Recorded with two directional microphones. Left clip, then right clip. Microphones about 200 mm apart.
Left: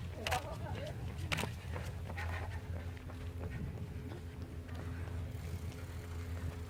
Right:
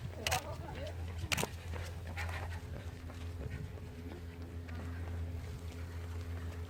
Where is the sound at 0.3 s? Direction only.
45° right (ahead or behind).